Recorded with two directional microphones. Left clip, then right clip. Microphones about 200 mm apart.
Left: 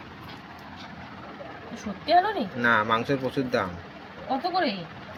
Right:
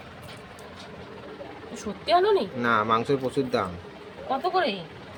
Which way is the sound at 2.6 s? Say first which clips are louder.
Even; 15° right (ahead or behind).